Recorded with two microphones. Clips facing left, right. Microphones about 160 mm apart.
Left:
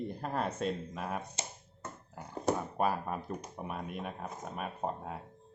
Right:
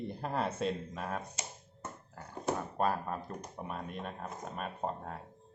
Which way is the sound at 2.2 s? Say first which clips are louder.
Left 3 dB; 15° left (ahead or behind).